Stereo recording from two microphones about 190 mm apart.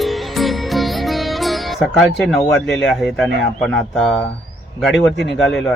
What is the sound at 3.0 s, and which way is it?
Speech, centre (ahead or behind).